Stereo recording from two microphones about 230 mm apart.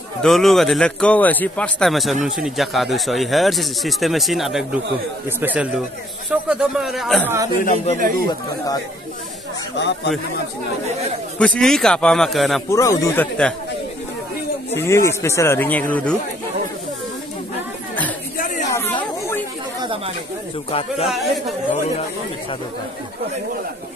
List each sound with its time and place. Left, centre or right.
0.2 s speech: centre
7.6 s speech: left
9.8 s speech: left
11.3 s speech: centre
12.6 s speech: centre
14.8 s speech: centre
18.7 s chatter: centre
21.1 s speech: centre